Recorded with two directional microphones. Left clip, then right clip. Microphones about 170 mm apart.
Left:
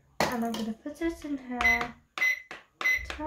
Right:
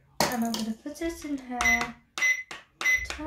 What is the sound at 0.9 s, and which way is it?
Speech, 40° left (ahead or behind).